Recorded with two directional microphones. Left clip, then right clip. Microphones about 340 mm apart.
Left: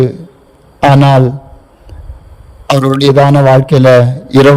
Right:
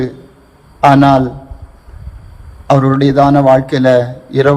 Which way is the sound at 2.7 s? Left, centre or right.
Left.